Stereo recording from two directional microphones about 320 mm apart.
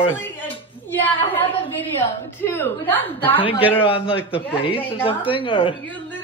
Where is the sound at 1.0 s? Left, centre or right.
Centre.